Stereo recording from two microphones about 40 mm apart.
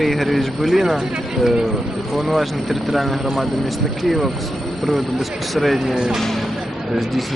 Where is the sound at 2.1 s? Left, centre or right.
Centre.